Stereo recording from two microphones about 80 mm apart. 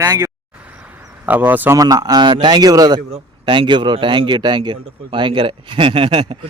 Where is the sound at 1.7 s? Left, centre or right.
Right.